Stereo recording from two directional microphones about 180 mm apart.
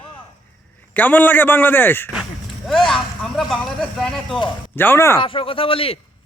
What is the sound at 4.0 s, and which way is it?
Speech, centre (ahead or behind).